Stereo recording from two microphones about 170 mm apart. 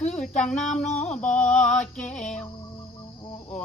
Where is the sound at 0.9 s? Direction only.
40° left (ahead or behind).